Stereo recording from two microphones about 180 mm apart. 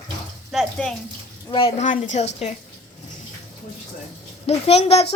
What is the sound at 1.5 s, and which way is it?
Speech, 30° left (ahead or behind).